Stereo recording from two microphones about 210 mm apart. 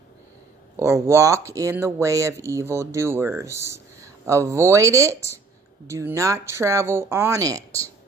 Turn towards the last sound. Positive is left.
turn(degrees=-15)  # may be behind; listen again after turning